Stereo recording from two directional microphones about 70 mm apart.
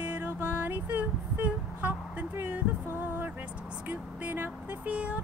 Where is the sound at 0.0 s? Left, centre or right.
Right.